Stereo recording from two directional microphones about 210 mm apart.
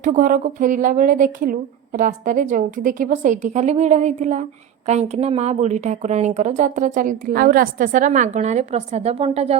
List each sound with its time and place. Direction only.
0.0 s speech: 35° right (ahead or behind)